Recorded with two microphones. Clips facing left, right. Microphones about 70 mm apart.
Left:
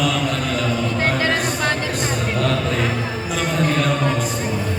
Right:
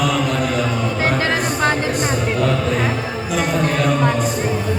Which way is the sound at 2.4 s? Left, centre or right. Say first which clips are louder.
Right 1 dB; centre.